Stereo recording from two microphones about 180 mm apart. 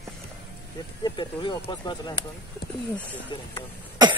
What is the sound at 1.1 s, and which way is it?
Speech, 25° left (ahead or behind).